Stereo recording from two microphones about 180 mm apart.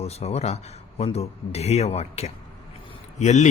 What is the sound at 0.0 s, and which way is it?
Speech, 35° left (ahead or behind).